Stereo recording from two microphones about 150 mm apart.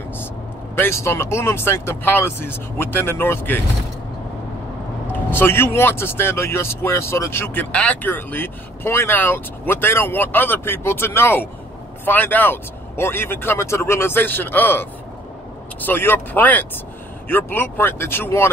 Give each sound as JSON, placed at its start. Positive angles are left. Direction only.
{"t": 0.7, "sound": "speech", "side_deg": 15}
{"t": 5.3, "sound": "speech", "side_deg": 15}